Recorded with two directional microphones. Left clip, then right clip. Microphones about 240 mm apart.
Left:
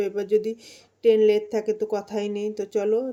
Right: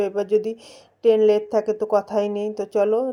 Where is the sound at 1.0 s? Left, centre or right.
Centre.